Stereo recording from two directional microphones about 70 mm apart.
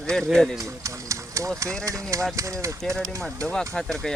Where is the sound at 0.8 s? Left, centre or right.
Right.